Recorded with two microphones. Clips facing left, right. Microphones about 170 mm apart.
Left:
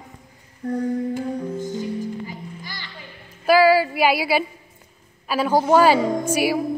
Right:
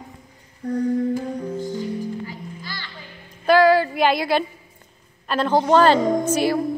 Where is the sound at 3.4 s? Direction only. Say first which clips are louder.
Even; 5° left (ahead or behind).